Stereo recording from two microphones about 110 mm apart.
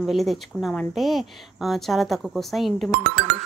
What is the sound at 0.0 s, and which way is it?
A woman's voice, centre (ahead or behind).